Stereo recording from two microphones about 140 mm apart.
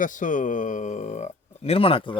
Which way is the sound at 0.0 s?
65° left (ahead or behind).